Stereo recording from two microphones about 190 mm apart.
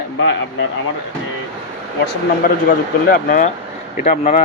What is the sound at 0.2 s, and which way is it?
Speech, 65° left (ahead or behind).